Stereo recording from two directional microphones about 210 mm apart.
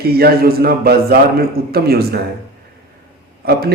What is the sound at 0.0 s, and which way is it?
A man's voice, 50° right (ahead or behind).